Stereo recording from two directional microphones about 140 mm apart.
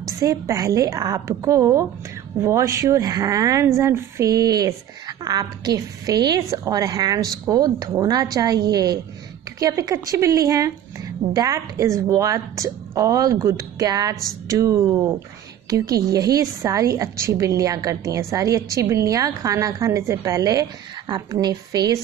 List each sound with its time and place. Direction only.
0.0 s a woman's voice: 25° right (ahead or behind)